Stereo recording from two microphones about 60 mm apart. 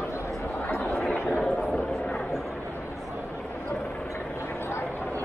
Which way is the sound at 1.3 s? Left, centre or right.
Centre.